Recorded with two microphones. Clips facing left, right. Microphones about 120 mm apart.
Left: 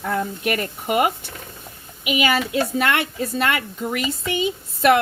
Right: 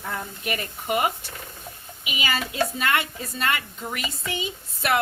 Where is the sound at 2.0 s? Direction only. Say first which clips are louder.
Left 8 dB; 70° left (ahead or behind).